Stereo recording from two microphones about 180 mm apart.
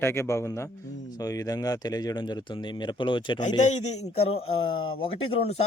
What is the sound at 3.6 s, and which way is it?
A man's voice, 40° left (ahead or behind).